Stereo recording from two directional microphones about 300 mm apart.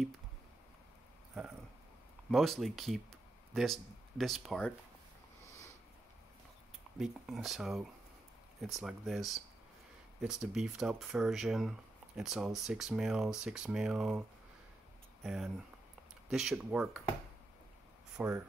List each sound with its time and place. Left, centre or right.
2.3 s speech: centre
7.0 s speech: centre
15.2 s speech: centre
18.1 s speech: centre